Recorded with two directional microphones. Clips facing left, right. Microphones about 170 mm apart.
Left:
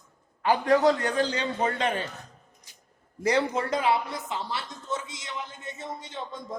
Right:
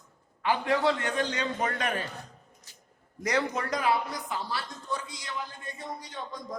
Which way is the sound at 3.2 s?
30° left (ahead or behind).